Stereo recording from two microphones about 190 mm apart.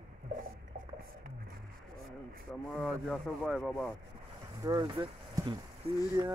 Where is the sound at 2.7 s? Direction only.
Centre (ahead or behind).